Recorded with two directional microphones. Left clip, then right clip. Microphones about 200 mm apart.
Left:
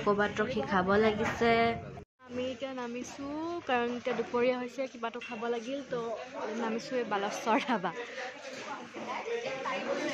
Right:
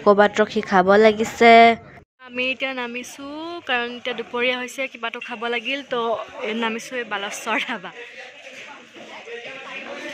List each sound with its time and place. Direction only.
0.0 s a woman's voice: 35° right (ahead or behind)
2.3 s speech: 15° right (ahead or behind)
5.9 s a man's voice: 45° right (ahead or behind)
7.0 s speech: centre (ahead or behind)